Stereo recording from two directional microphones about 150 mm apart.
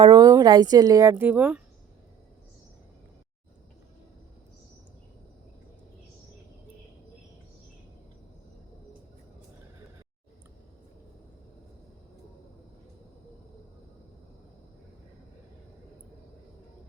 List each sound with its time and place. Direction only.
0.0 s a woman's voice: 30° right (ahead or behind)
1.1 s speech: 10° right (ahead or behind)